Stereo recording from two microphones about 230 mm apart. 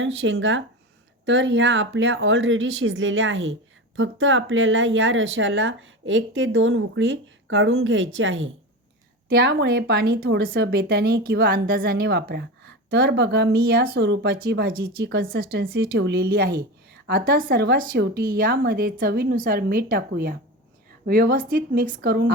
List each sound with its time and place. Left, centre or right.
0.0 s speech: right
9.3 s speech: right